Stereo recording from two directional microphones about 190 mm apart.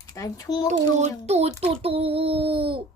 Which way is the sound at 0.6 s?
35° right (ahead or behind).